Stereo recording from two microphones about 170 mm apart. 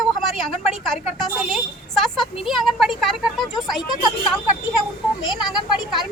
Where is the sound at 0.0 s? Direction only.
Centre (ahead or behind).